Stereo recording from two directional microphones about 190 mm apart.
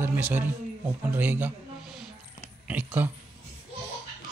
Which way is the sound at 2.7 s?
10° right (ahead or behind).